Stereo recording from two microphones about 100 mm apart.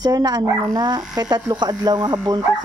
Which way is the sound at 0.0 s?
40° right (ahead or behind).